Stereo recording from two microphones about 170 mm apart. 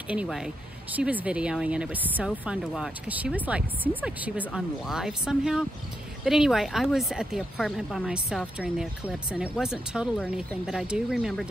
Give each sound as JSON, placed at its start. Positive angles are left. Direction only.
{"t": 0.1, "sound": "speech", "side_deg": -5}